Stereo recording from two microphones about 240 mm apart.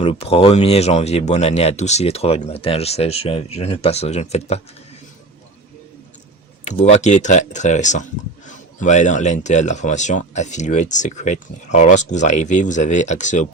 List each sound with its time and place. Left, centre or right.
0.0 s speech: left
6.7 s speech: left